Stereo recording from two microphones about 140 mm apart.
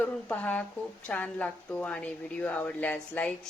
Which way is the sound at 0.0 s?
10° left (ahead or behind).